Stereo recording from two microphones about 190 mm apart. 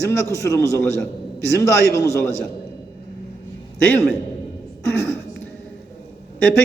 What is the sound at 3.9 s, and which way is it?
A man's voice, 5° left (ahead or behind).